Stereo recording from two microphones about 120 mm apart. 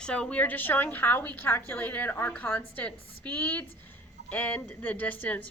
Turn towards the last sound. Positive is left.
turn(degrees=15)  # may be behind; listen again after turning